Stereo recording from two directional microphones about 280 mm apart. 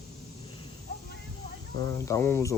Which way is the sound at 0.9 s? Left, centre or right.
Left.